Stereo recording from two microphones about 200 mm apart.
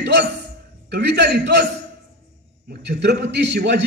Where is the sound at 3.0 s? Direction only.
55° right (ahead or behind).